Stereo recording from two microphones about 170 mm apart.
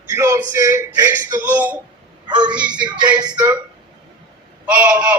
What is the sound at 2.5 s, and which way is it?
Music, 5° right (ahead or behind).